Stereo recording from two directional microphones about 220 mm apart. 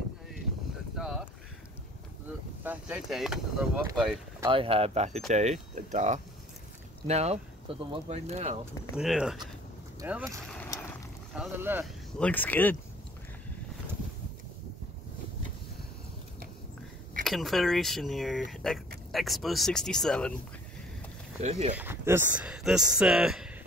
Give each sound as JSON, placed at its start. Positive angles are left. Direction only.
{"t": 0.9, "sound": "speech", "side_deg": 0}
{"t": 2.6, "sound": "speech", "side_deg": -5}
{"t": 4.4, "sound": "speech", "side_deg": -25}
{"t": 8.9, "sound": "speech", "side_deg": -5}
{"t": 12.2, "sound": "speech", "side_deg": 5}
{"t": 17.2, "sound": "speech", "side_deg": 0}
{"t": 21.4, "sound": "speech", "side_deg": -30}
{"t": 21.7, "sound": "speech", "side_deg": -10}